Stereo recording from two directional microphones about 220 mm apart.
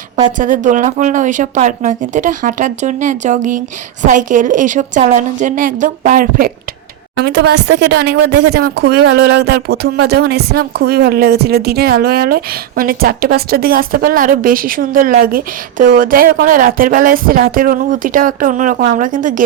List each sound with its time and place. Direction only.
0.3 s a woman's voice: 35° right (ahead or behind)